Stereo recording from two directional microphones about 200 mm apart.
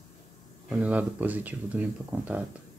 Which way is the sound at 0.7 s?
5° right (ahead or behind).